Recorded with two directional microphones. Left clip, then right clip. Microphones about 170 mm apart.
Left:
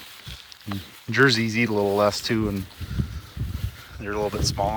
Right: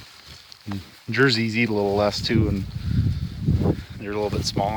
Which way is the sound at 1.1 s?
10° right (ahead or behind).